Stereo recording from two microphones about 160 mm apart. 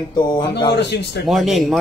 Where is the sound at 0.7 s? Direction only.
90° left.